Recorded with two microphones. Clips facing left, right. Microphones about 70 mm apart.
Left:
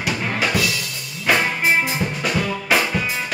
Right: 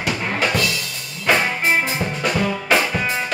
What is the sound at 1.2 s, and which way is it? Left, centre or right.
Music, centre.